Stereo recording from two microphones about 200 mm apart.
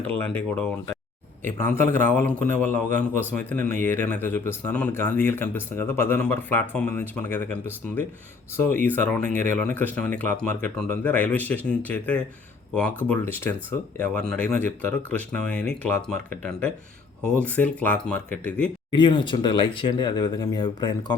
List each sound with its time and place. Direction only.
0.3 s speech: 5° left (ahead or behind)
1.7 s speech: 10° left (ahead or behind)
18.9 s speech: 20° left (ahead or behind)